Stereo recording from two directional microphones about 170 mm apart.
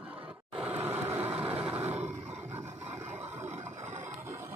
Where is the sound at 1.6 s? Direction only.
10° right (ahead or behind).